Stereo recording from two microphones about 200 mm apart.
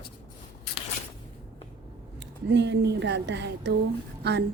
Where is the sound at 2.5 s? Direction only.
60° right (ahead or behind).